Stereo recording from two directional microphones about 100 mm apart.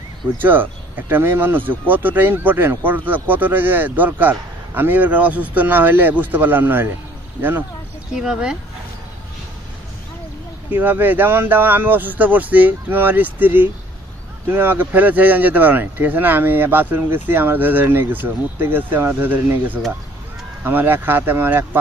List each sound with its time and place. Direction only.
0.4 s speech: 20° right (ahead or behind)
8.1 s speech: 5° right (ahead or behind)
10.7 s speech: 20° right (ahead or behind)